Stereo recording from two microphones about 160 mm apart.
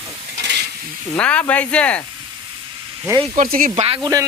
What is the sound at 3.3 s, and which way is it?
Speech, 55° right (ahead or behind).